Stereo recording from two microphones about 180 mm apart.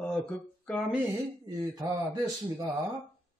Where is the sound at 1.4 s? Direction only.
20° right (ahead or behind).